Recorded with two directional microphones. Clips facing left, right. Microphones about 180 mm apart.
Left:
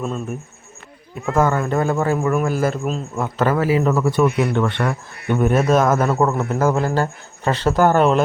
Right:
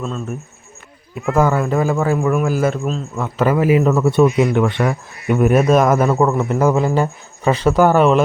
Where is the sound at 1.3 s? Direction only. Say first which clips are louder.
Right 2 dB; 10° right (ahead or behind).